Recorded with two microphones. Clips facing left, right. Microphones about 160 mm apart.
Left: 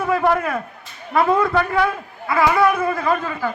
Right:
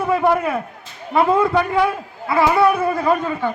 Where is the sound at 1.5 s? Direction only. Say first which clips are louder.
Right 1 dB; 20° right (ahead or behind).